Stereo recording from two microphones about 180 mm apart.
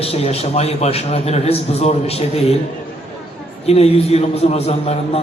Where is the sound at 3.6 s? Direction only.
35° left (ahead or behind).